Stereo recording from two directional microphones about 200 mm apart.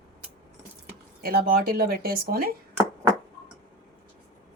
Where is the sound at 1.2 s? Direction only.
45° right (ahead or behind).